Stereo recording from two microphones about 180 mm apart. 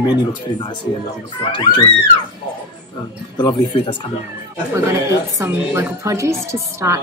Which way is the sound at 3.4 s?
25° left (ahead or behind).